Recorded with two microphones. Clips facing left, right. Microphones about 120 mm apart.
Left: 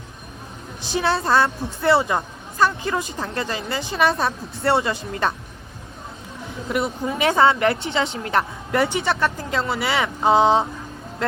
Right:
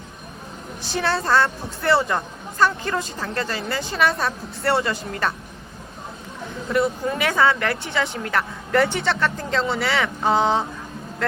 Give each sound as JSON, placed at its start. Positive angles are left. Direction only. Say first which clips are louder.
{"t": 0.8, "sound": "a woman's voice", "louder": "left 2 dB", "side_deg": 20}
{"t": 6.7, "sound": "a woman's voice", "louder": "right 2 dB", "side_deg": 20}
{"t": 8.7, "sound": "speech", "louder": "right 1 dB", "side_deg": 15}
{"t": 9.8, "sound": "a woman's voice", "louder": "left 1 dB", "side_deg": 20}